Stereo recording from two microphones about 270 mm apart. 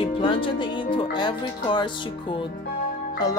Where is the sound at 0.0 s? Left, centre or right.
Centre.